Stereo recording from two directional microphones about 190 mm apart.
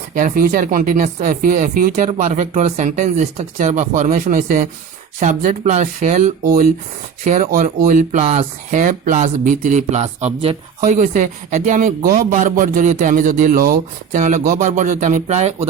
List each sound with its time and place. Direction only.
0.1 s speech: 45° right (ahead or behind)